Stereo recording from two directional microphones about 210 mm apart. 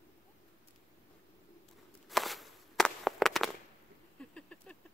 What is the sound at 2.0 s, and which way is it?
Walk, centre (ahead or behind).